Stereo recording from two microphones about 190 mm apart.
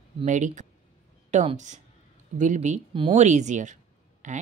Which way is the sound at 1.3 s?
40° right (ahead or behind).